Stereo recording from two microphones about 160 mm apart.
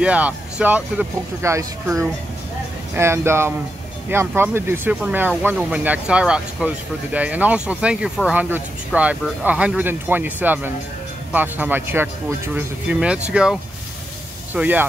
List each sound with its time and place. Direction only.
0.0 s speech: 10° right (ahead or behind)